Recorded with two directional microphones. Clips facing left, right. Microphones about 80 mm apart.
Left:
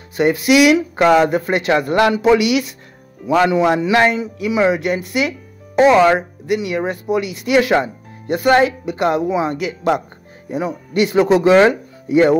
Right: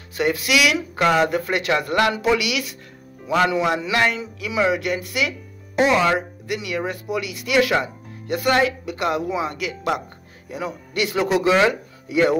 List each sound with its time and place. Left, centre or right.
0.1 s speech: left
6.0 s speech: left